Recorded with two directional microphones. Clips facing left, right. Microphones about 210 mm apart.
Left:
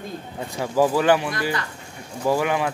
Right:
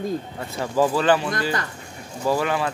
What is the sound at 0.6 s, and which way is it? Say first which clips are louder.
Speech: left 1 dB; 10° left (ahead or behind).